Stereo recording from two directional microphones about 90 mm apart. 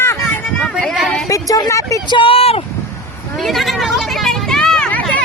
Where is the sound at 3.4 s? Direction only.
Centre (ahead or behind).